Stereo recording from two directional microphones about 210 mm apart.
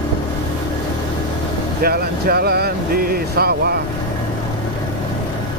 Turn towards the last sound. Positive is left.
turn(degrees=-50)  # may be behind; listen again after turning